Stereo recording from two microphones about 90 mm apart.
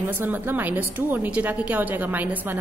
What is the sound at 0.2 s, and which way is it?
A woman's voice, 20° right (ahead or behind).